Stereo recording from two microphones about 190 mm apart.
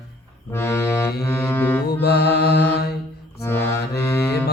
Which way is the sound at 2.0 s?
55° left (ahead or behind).